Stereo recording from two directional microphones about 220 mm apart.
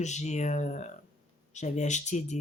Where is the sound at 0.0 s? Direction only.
30° left (ahead or behind).